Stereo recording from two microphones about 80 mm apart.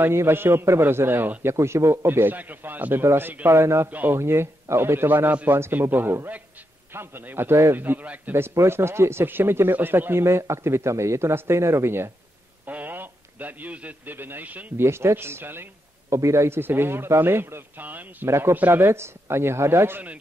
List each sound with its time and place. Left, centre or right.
0.0 s a man's voice: right
3.9 s a man's voice: right
4.2 s a man's voice: right
14.9 s a man's voice: right